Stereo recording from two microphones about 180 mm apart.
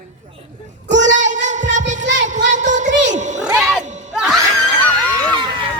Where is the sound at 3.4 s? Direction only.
5° right (ahead or behind).